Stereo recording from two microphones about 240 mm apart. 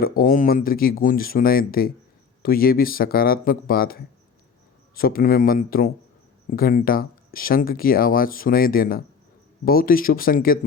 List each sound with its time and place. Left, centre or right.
0.0 s speech: left